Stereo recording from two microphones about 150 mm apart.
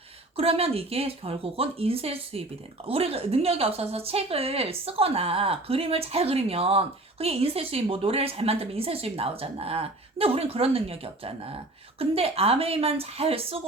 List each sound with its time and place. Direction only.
0.3 s a woman's voice: 40° right (ahead or behind)